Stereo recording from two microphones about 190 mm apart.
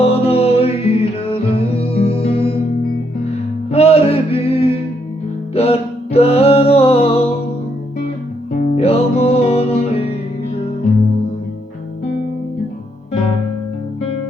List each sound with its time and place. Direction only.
0.0 s music: 30° left (ahead or behind)
3.7 s music: 35° left (ahead or behind)
8.7 s music: 30° left (ahead or behind)